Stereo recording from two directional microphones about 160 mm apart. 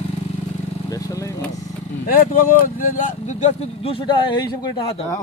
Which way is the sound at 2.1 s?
60° left (ahead or behind).